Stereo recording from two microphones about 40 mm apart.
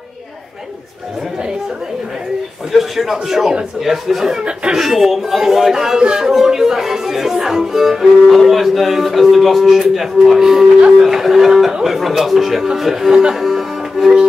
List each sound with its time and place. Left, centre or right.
2.7 s speech: centre
4.3 s speech: right
4.7 s speech: centre
13.4 s music: centre